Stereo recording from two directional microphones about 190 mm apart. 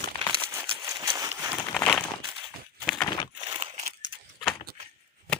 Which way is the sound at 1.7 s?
5° left (ahead or behind).